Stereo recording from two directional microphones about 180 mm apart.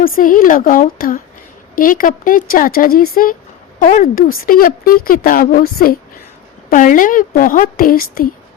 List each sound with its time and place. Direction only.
0.0 s a woman's voice: 50° left (ahead or behind)